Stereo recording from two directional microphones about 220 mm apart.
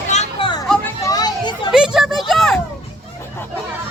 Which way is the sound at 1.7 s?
5° right (ahead or behind).